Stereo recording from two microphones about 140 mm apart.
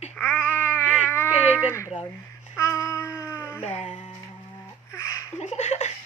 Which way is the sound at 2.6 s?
20° left (ahead or behind).